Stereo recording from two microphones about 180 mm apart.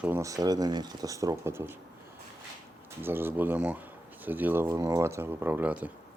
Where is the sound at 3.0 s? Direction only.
10° right (ahead or behind).